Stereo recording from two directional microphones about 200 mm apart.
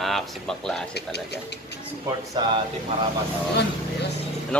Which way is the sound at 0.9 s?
55° left (ahead or behind).